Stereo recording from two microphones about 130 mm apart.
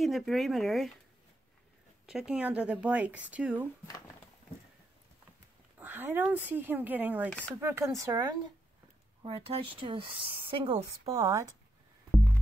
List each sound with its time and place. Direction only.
0.0 s speech: centre (ahead or behind)
2.0 s speech: 5° right (ahead or behind)
5.8 s speech: 15° right (ahead or behind)
7.2 s speech: 10° left (ahead or behind)
7.6 s speech: 20° right (ahead or behind)
9.2 s speech: 45° right (ahead or behind)
11.1 s speech: 25° right (ahead or behind)